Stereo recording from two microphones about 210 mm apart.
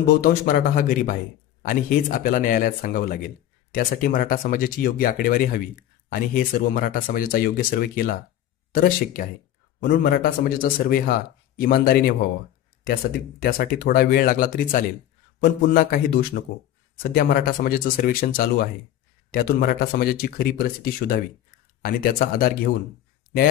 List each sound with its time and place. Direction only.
0.0 s speech: 45° left (ahead or behind)
13.4 s speech: 45° left (ahead or behind)